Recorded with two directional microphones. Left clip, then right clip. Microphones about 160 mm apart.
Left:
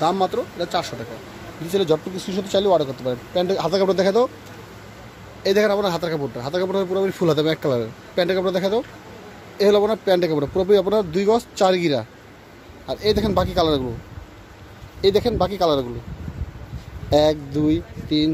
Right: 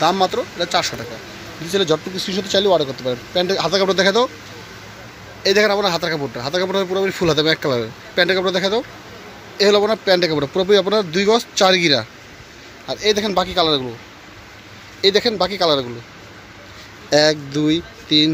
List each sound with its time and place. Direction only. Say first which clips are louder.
0.0 s speech: right 3 dB; 5° left (ahead or behind)
5.4 s a man's voice: right 3 dB; 10° left (ahead or behind)
15.0 s speech: right 2 dB; 10° left (ahead or behind)
17.1 s speech: right 2 dB; centre (ahead or behind)